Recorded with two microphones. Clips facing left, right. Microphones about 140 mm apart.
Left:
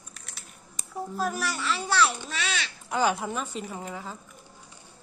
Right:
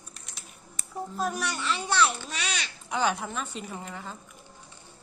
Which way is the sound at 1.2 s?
Centre (ahead or behind).